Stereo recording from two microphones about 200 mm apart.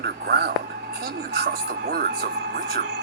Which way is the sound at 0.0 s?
55° right (ahead or behind).